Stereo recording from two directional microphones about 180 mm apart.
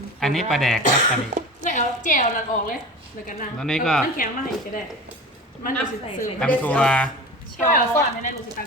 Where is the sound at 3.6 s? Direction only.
5° left (ahead or behind).